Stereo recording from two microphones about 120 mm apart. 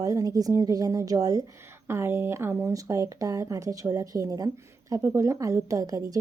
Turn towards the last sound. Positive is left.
turn(degrees=-30)  # may be behind; listen again after turning